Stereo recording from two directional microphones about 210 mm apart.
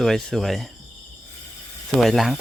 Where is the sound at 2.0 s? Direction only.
Centre (ahead or behind).